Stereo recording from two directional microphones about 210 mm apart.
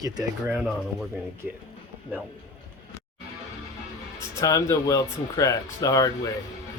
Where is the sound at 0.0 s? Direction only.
15° right (ahead or behind).